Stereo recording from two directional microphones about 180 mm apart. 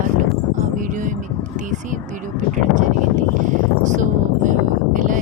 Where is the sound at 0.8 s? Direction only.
45° right (ahead or behind).